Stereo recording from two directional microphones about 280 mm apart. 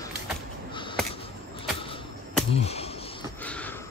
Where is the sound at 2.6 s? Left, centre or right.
Left.